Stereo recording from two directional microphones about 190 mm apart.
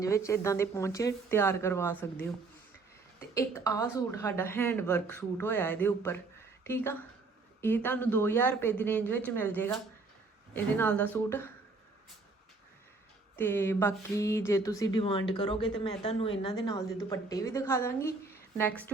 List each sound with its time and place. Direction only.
0.0 s a woman's voice: 15° left (ahead or behind)
3.3 s a woman's voice: 15° left (ahead or behind)
13.3 s a woman's voice: 10° left (ahead or behind)